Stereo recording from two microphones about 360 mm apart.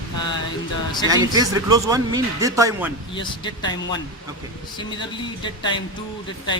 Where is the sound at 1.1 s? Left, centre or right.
Centre.